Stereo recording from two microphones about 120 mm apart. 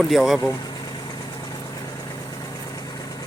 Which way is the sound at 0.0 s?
Centre (ahead or behind).